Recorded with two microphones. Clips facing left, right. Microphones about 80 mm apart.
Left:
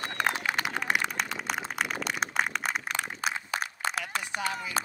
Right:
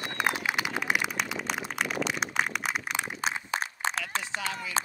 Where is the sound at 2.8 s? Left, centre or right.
Centre.